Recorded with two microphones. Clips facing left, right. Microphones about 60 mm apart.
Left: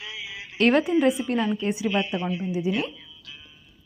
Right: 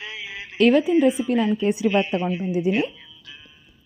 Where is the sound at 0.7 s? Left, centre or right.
Left.